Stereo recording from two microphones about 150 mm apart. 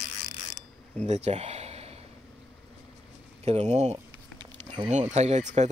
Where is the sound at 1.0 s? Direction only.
50° right (ahead or behind).